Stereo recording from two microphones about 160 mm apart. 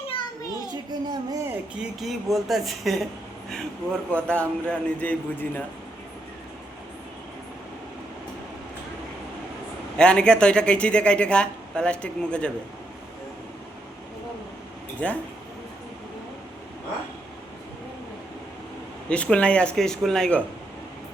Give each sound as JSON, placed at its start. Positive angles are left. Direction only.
{"t": 0.1, "sound": "children playing", "side_deg": 25}
{"t": 0.7, "sound": "a child's voice", "side_deg": -25}
{"t": 1.5, "sound": "speech", "side_deg": -5}
{"t": 4.1, "sound": "a man's voice", "side_deg": 5}
{"t": 10.0, "sound": "a man's voice", "side_deg": 5}
{"t": 15.0, "sound": "a man's voice", "side_deg": 5}
{"t": 19.0, "sound": "a man's voice", "side_deg": 10}